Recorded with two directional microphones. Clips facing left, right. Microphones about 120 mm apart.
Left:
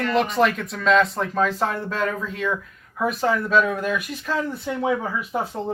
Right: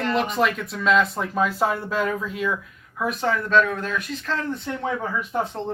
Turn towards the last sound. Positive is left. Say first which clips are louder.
# even
turn(degrees=5)  # may be behind; listen again after turning